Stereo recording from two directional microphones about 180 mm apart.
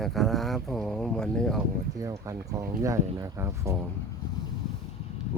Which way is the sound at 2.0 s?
20° right (ahead or behind).